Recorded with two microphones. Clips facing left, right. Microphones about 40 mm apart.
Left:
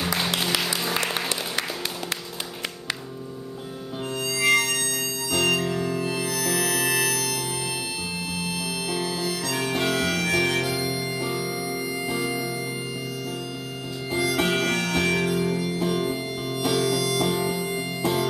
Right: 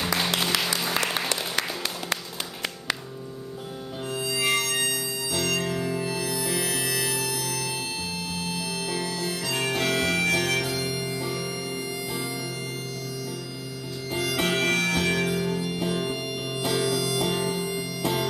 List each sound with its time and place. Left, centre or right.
0.0 s music: centre
4.2 s harmonica: centre
4.7 s music: centre
8.4 s music: left
9.3 s harmonica: centre
11.3 s music: centre
12.1 s music: left
14.4 s music: centre